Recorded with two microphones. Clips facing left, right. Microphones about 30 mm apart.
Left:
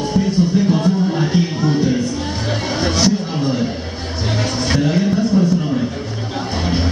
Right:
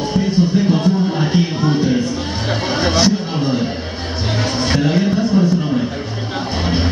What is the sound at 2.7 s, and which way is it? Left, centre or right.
Chatter, centre.